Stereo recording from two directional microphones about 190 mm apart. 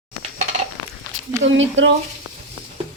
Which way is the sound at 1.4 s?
80° right.